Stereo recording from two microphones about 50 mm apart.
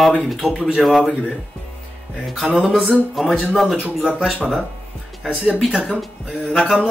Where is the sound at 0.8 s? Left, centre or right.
Centre.